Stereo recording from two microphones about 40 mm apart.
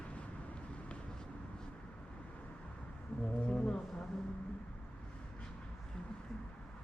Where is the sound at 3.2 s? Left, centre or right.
Left.